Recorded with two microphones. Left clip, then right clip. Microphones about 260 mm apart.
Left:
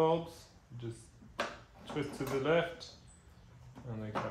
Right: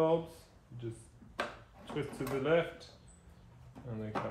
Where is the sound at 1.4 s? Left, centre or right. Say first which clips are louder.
Left 1 dB; centre.